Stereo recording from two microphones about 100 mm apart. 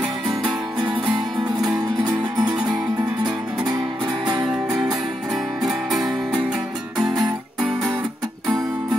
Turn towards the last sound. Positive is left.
turn(degrees=-5)  # may be behind; listen again after turning